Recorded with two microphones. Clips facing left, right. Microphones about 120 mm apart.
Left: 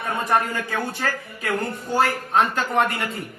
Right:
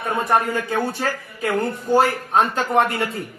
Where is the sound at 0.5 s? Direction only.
15° right (ahead or behind).